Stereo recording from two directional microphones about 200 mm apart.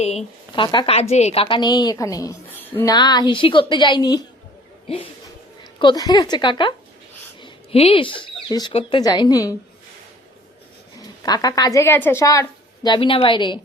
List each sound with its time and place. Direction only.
0.5 s a woman's voice: 25° left (ahead or behind)
5.8 s a woman's voice: 20° left (ahead or behind)
11.3 s a woman's voice: 20° left (ahead or behind)